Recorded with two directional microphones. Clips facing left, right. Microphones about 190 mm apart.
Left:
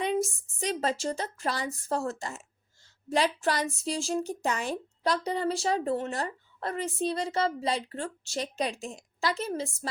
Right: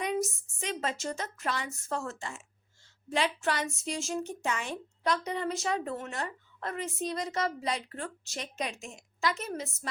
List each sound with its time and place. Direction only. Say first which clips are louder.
0.0 s a woman's voice: left 3 dB; 30° left (ahead or behind)